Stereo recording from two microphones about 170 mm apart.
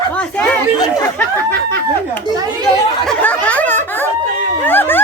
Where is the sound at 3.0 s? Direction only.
5° left (ahead or behind).